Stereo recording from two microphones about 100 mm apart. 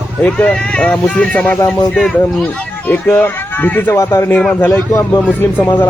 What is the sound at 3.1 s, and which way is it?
Speech, 20° left (ahead or behind).